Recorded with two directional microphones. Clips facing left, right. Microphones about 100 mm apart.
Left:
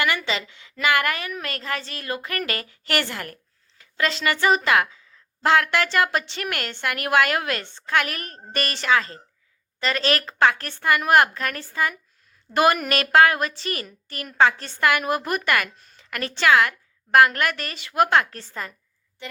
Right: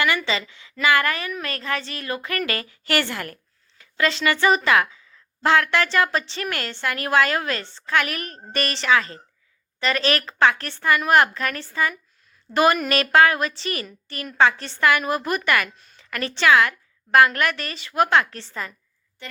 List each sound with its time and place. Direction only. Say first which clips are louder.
0.0 s a woman's voice: right 2 dB; 45° left (ahead or behind)
3.8 s a woman's voice: right 2 dB; 40° left (ahead or behind)